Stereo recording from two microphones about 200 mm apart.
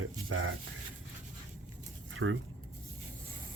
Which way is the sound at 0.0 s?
80° right.